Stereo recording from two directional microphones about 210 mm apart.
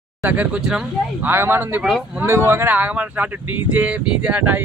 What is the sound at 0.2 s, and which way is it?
Speech, 5° right (ahead or behind).